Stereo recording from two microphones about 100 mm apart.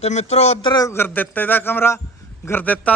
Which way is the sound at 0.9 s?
20° left (ahead or behind).